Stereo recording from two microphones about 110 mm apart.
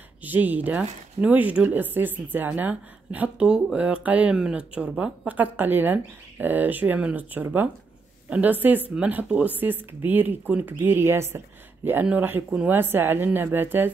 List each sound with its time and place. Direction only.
0.2 s a woman's voice: 15° right (ahead or behind)